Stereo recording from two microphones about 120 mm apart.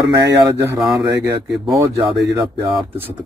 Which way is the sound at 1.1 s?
35° right (ahead or behind).